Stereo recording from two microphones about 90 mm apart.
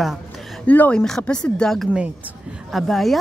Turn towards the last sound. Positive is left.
turn(degrees=0)  # may be behind; listen again after turning